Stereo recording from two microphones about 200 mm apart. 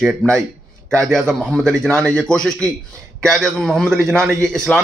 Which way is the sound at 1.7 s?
5° left (ahead or behind).